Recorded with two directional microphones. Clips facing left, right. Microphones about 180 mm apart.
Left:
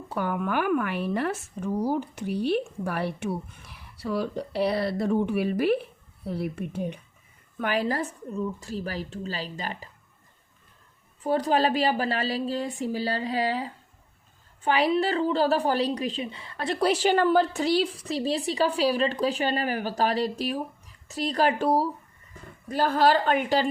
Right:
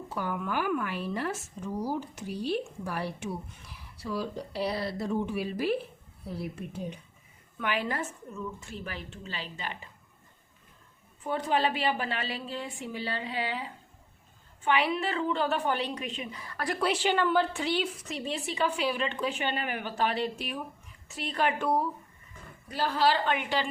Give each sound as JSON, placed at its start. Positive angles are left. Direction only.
{"t": 0.1, "sound": "speech", "side_deg": 60}
{"t": 7.6, "sound": "a woman's voice", "side_deg": 40}
{"t": 11.2, "sound": "a woman's voice", "side_deg": 35}
{"t": 16.8, "sound": "a woman's voice", "side_deg": 40}
{"t": 22.7, "sound": "a woman's voice", "side_deg": 45}